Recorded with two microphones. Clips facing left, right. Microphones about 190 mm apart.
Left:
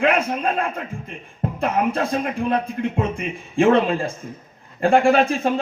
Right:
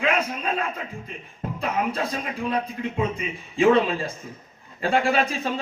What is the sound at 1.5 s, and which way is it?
A man's voice, 50° left (ahead or behind).